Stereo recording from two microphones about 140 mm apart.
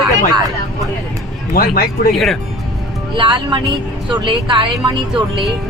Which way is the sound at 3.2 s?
35° right (ahead or behind).